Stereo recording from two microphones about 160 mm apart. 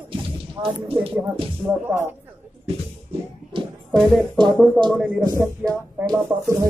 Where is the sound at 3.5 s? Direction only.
30° right (ahead or behind).